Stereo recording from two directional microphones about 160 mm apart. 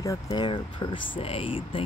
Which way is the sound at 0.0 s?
20° left (ahead or behind).